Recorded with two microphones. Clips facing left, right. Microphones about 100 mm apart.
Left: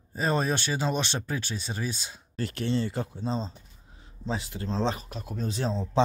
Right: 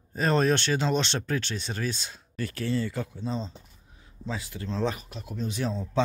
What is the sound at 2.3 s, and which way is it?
Speech, 25° left (ahead or behind).